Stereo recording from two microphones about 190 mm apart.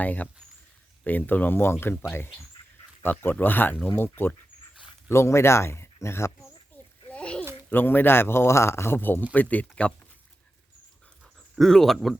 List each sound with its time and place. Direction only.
0.0 s speech: 10° left (ahead or behind)
7.1 s a sound: 5° left (ahead or behind)
7.7 s speech: 10° left (ahead or behind)
11.5 s speech: centre (ahead or behind)